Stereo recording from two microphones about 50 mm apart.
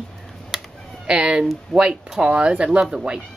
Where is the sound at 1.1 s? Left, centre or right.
Centre.